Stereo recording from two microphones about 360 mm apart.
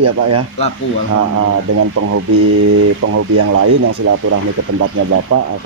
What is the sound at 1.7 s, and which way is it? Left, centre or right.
Speech, right.